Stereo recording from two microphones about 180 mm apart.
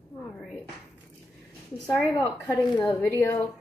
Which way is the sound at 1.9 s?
10° left (ahead or behind).